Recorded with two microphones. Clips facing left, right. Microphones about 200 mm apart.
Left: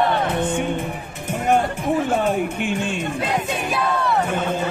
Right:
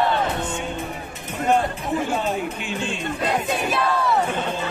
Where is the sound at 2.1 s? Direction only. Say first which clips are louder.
Left 4 dB; 55° left (ahead or behind).